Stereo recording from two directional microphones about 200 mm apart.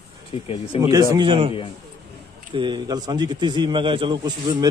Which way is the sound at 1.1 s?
25° right (ahead or behind).